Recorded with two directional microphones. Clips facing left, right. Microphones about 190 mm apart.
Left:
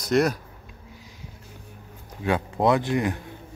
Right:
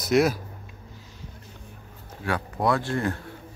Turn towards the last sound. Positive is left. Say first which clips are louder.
# left 2 dB
turn(degrees=15)  # may be behind; listen again after turning